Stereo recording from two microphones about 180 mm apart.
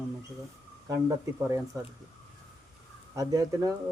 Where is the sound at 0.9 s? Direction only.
20° right (ahead or behind).